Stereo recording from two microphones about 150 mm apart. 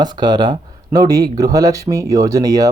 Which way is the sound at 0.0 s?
30° right (ahead or behind).